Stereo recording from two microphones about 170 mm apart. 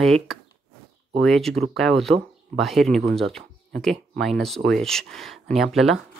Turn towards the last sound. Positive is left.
turn(degrees=0)  # may be behind; listen again after turning